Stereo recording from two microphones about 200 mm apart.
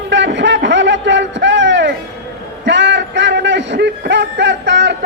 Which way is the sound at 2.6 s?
60° right (ahead or behind).